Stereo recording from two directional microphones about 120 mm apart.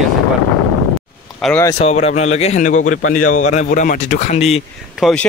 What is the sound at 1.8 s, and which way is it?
Speech, 60° left (ahead or behind).